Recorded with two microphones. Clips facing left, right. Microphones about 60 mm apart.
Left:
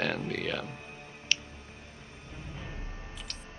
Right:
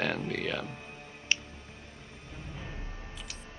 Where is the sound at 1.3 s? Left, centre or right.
Right.